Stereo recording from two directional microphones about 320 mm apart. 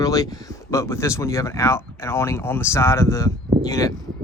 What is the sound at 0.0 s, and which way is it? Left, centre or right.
Speech, centre.